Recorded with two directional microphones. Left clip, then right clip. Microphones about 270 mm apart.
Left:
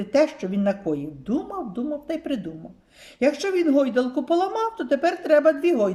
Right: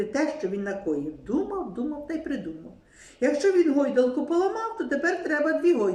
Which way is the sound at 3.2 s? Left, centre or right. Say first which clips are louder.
Even; left.